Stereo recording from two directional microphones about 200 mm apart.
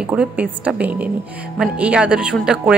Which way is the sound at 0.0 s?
5° right (ahead or behind).